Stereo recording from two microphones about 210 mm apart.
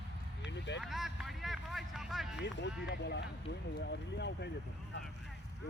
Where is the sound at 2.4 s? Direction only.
55° left (ahead or behind).